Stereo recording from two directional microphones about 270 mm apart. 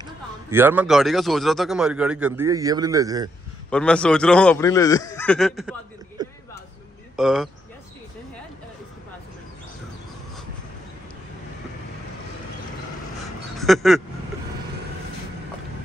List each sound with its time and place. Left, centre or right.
0.0 s a man's voice: centre
3.7 s a man's voice: centre
6.2 s a sound: centre
7.2 s speech: centre
13.6 s speech: centre